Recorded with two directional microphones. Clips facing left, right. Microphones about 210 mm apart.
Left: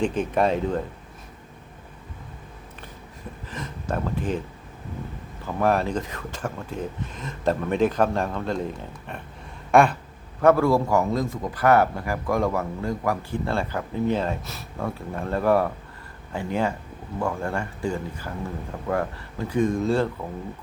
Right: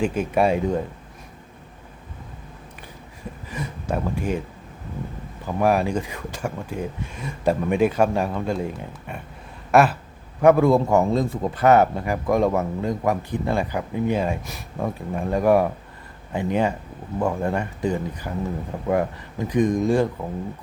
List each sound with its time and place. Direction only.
0.0 s speech: 10° right (ahead or behind)
3.5 s speech: 10° right (ahead or behind)
5.5 s speech: 10° right (ahead or behind)
9.7 s a sound: 5° right (ahead or behind)
10.4 s speech: 20° right (ahead or behind)